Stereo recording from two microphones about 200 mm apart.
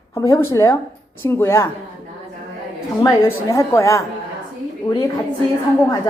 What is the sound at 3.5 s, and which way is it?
Speech, 15° left (ahead or behind).